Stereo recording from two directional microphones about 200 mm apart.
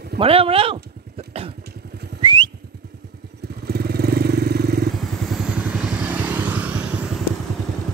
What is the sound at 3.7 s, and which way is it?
Motorcycle, 50° right (ahead or behind).